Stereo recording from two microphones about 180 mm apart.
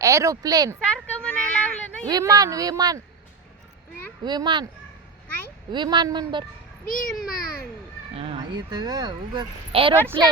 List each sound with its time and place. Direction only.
0.0 s speech: 20° right (ahead or behind)
0.8 s a sound: 5° left (ahead or behind)
2.0 s speech: 20° right (ahead or behind)
4.2 s speech: 25° right (ahead or behind)
5.7 s speech: 25° right (ahead or behind)
6.8 s a child's voice: 50° left (ahead or behind)
8.1 s speech: 30° right (ahead or behind)